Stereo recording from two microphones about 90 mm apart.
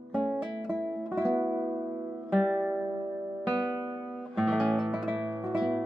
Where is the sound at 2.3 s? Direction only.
5° left (ahead or behind).